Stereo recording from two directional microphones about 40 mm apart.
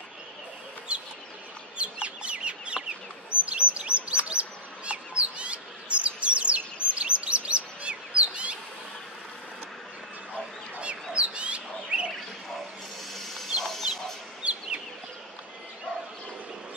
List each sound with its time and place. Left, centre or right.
0.9 s chicken: right
3.4 s bird vocalization: right
4.3 s bird: right
10.8 s bird: right
13.6 s chicken: centre
14.4 s chicken: right